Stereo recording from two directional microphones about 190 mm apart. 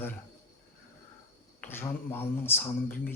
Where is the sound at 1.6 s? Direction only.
10° left (ahead or behind).